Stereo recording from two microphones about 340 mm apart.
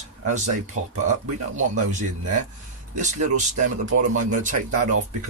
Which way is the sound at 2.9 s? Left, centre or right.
Right.